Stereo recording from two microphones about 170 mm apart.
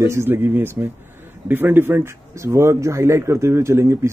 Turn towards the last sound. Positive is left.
turn(degrees=-15)  # may be behind; listen again after turning